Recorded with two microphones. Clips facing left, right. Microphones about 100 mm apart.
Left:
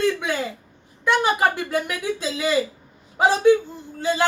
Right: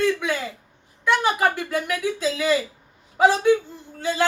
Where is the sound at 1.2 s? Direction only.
20° left (ahead or behind).